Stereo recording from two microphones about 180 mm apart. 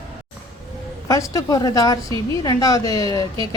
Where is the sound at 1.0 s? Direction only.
20° left (ahead or behind).